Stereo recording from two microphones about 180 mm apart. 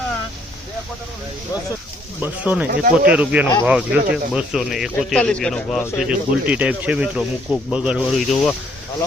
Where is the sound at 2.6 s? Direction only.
55° right (ahead or behind).